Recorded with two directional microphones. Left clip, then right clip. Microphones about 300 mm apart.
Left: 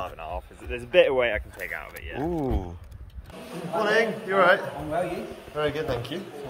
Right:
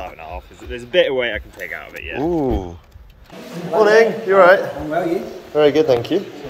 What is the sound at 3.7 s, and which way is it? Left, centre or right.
Speech, centre.